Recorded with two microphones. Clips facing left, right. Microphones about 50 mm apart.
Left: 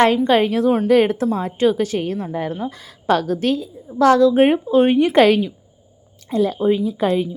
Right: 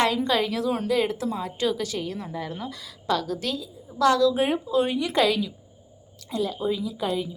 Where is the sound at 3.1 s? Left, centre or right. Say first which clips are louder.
Left 9 dB; left.